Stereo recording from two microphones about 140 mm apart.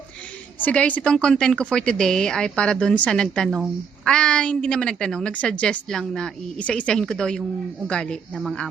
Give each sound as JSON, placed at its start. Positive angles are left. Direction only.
{"t": 0.6, "sound": "a woman's voice", "side_deg": 10}